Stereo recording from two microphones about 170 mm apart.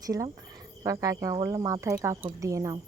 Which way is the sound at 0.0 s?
20° right (ahead or behind).